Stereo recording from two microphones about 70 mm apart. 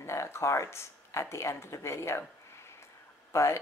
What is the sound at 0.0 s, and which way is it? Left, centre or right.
Speech, left.